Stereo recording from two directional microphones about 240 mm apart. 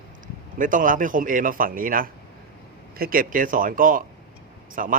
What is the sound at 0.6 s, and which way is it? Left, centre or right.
Speech, right.